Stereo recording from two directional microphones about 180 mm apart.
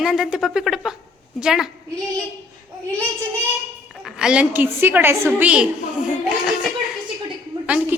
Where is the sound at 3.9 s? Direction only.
Centre (ahead or behind).